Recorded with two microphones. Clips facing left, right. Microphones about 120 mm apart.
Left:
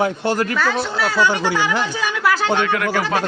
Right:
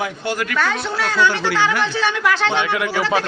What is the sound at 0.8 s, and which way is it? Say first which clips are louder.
Speech: even; 5° left (ahead or behind).